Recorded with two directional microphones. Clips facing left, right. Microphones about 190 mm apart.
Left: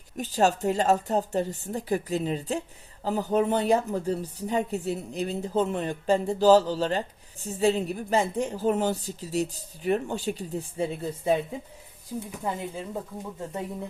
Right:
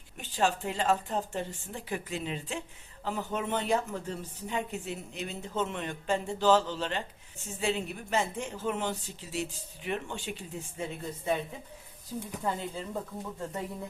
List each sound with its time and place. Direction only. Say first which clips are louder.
0.2 s a woman's voice: left 6 dB; 40° left (ahead or behind)
12.4 s speech: left 1 dB; 15° left (ahead or behind)